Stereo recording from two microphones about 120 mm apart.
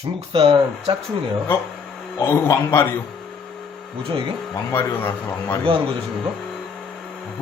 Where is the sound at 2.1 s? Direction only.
20° left (ahead or behind).